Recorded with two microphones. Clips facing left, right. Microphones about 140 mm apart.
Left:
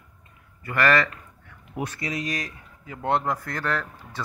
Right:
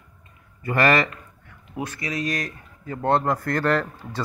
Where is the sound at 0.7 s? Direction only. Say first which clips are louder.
Right 2 dB; 20° right (ahead or behind).